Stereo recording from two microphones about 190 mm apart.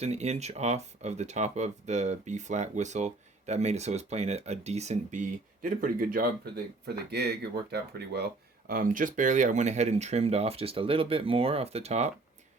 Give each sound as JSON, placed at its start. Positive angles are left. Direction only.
{"t": 0.0, "sound": "speech", "side_deg": -35}
{"t": 5.6, "sound": "speech", "side_deg": -45}